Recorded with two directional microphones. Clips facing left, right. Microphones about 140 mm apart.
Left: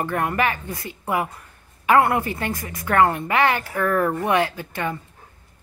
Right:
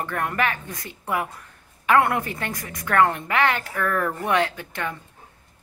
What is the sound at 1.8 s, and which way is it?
A woman's voice, 5° left (ahead or behind).